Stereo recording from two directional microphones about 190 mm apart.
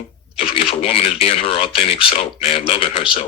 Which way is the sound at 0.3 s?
30° left (ahead or behind).